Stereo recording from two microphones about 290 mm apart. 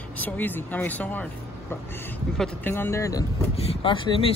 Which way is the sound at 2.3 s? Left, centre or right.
Centre.